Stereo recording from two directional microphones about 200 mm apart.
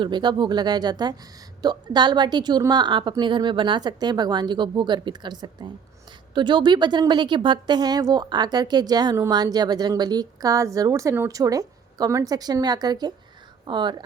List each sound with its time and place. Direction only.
0.0 s speech: 20° right (ahead or behind)